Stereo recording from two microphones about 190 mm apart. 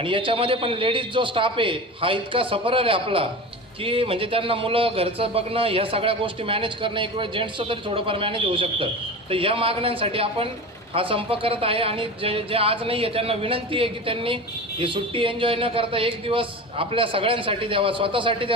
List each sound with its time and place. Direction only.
0.0 s a man's voice: 25° right (ahead or behind)